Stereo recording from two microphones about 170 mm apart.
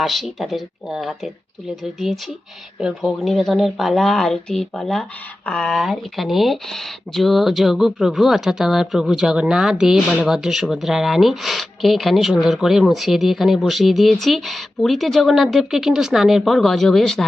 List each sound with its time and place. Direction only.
0.0 s speech: centre (ahead or behind)